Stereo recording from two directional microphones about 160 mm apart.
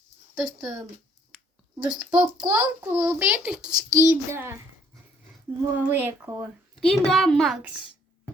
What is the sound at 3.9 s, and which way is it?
Speech, 20° right (ahead or behind).